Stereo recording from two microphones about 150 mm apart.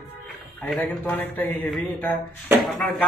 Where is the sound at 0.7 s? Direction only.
10° left (ahead or behind).